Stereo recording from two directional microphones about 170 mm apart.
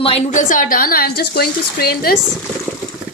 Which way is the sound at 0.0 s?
40° left (ahead or behind).